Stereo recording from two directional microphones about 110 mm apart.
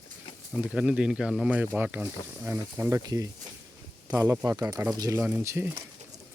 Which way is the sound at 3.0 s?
35° right (ahead or behind).